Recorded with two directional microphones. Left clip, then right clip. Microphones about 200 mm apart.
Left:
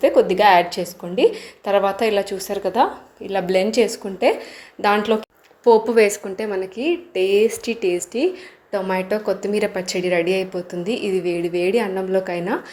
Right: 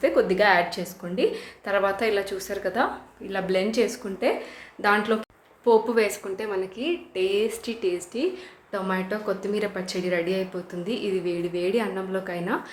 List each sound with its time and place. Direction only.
0.0 s a woman's voice: 25° left (ahead or behind)